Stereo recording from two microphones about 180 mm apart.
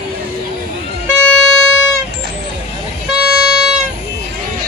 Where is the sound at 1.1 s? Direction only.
5° left (ahead or behind).